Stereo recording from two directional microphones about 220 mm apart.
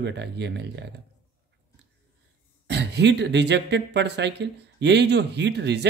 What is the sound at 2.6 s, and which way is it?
Speech, 50° right (ahead or behind).